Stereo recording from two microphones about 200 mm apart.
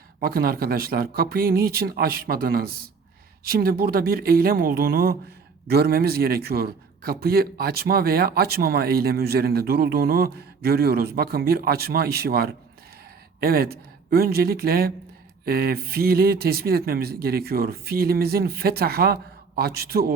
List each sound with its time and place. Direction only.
0.2 s a man's voice: 50° right (ahead or behind)